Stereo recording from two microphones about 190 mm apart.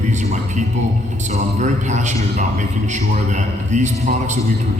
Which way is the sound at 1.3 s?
40° right (ahead or behind).